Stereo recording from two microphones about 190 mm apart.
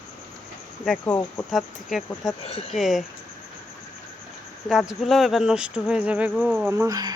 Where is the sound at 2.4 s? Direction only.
30° left (ahead or behind).